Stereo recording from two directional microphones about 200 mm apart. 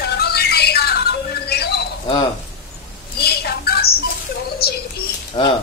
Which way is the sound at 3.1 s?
50° left (ahead or behind).